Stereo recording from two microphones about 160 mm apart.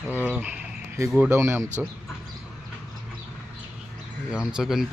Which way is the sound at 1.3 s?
15° right (ahead or behind).